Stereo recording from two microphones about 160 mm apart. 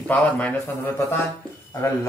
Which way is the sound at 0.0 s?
10° left (ahead or behind).